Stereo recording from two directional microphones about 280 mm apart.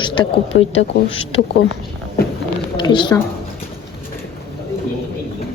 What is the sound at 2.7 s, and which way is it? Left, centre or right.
Speech, centre.